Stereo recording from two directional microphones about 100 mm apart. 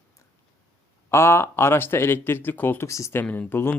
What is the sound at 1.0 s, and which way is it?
Speech, 25° left (ahead or behind).